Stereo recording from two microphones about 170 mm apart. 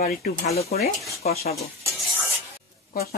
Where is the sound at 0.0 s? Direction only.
50° left (ahead or behind).